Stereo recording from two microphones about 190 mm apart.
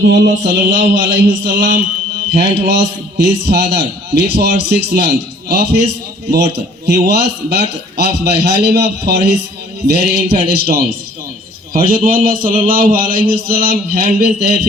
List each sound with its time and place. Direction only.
0.0 s a man's voice: 65° right (ahead or behind)
0.9 s speech: 45° right (ahead or behind)
2.3 s a man's voice: 60° right (ahead or behind)